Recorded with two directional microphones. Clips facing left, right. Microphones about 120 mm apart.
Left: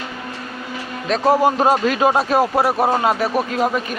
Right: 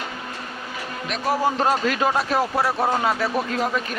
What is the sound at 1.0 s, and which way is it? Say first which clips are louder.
Speech: left 10 dB; 35° left (ahead or behind).